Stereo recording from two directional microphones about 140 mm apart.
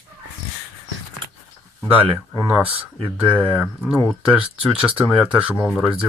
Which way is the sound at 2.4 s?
5° right (ahead or behind).